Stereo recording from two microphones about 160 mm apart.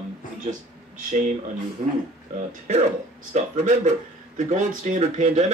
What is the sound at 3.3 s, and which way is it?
Speech, 45° right (ahead or behind).